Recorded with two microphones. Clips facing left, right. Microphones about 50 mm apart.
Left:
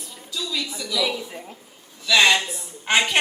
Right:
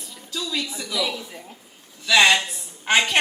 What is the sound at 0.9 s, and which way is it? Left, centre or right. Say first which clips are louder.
Speech: left 2 dB; centre.